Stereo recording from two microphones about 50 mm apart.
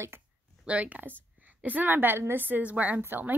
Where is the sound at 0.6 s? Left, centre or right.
Right.